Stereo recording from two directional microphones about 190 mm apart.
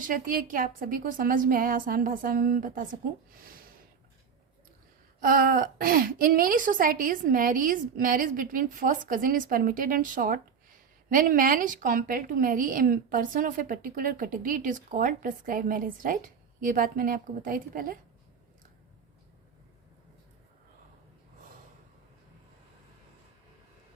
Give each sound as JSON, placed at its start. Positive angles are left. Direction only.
{"t": 0.0, "sound": "a woman's voice", "side_deg": -45}
{"t": 5.2, "sound": "a woman's voice", "side_deg": -45}